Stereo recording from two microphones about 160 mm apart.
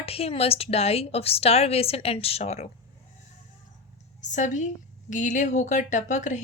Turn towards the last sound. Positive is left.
turn(degrees=50)  # may be behind; listen again after turning